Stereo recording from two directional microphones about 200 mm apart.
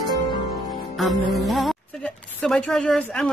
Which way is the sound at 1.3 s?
Centre (ahead or behind).